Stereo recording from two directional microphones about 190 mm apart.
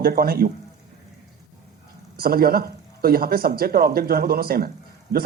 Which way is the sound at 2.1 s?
50° right (ahead or behind).